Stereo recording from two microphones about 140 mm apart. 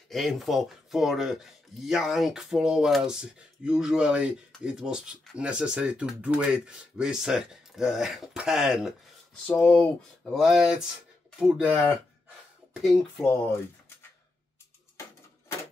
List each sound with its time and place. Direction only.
0.1 s speech: centre (ahead or behind)
9.5 s speech: 10° left (ahead or behind); by 12.0 s 5° right (ahead or behind)
13.2 s speech: 15° left (ahead or behind)